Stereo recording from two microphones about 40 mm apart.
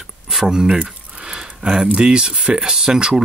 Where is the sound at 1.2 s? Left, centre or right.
Centre.